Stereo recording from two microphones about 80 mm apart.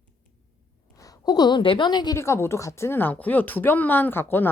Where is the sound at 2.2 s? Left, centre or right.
Left.